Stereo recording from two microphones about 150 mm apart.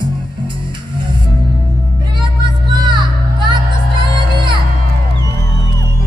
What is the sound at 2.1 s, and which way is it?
Music, 30° right (ahead or behind).